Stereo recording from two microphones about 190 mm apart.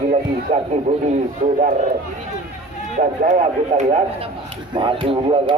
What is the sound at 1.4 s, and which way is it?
Speech, 45° right (ahead or behind).